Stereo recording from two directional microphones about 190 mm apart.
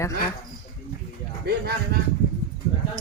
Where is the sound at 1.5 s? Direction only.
55° right (ahead or behind).